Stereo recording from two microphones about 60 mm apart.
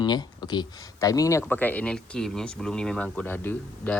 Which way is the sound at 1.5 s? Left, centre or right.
Left.